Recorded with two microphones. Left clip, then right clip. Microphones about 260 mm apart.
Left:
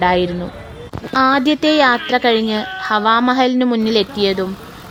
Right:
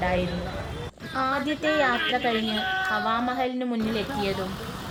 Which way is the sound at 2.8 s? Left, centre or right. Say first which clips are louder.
Left 11 dB; left.